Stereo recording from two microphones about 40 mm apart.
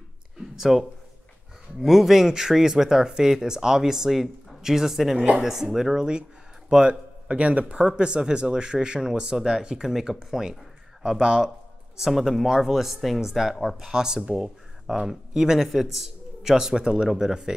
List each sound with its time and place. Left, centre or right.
0.6 s speech: centre
5.9 s speech: right
14.9 s speech: centre
15.6 s speech: centre